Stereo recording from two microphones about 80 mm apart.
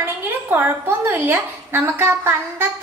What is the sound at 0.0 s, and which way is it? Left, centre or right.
A woman's voice, right.